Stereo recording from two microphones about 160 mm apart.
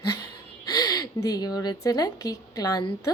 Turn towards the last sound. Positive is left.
turn(degrees=25)  # may be behind; listen again after turning